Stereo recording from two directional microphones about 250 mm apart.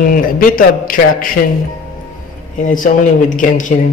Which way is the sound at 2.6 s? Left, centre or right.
Left.